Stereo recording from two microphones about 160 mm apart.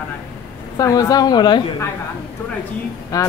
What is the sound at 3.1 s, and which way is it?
Speech, 20° left (ahead or behind).